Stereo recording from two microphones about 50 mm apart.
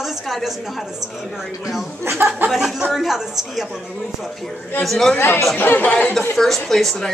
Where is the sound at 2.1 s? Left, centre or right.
Right.